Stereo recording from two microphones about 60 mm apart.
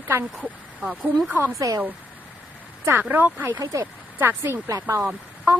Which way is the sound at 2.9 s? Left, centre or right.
Right.